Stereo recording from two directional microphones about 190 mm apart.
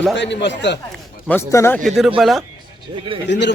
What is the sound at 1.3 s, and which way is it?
Speech, 15° left (ahead or behind).